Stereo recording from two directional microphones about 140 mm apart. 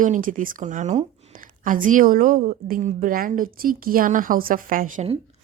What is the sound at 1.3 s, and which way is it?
A woman's voice, 75° right (ahead or behind).